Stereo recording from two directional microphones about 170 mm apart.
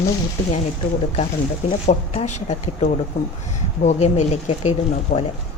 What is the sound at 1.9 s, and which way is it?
A man's voice, 45° left (ahead or behind).